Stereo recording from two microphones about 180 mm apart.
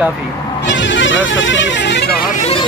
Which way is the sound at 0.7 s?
90° left.